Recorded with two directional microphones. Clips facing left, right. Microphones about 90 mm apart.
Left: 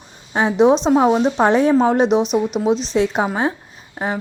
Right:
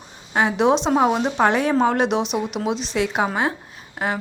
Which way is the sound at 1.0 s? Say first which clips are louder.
Left 4 dB; 5° right (ahead or behind).